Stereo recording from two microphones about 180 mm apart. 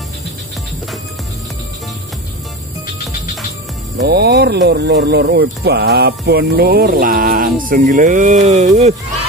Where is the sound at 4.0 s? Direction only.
65° right (ahead or behind); by 8.9 s 40° right (ahead or behind).